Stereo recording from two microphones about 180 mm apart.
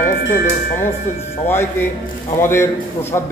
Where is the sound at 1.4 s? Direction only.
10° left (ahead or behind).